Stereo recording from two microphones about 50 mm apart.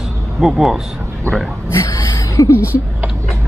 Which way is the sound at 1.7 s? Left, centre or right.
Left.